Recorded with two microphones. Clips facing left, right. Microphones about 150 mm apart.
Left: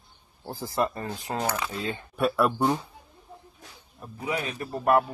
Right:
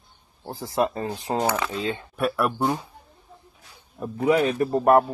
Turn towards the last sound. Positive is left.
turn(degrees=-35)  # may be behind; listen again after turning